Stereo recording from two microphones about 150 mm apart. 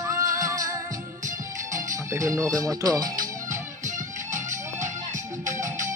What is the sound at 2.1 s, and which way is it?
Speech, 20° right (ahead or behind).